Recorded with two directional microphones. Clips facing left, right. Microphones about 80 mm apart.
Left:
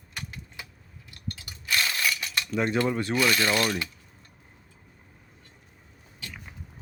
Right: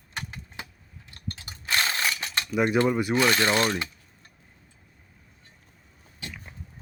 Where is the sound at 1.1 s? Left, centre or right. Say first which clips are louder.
Even; right.